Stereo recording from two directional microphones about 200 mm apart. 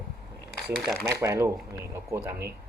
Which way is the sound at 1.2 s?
15° right (ahead or behind).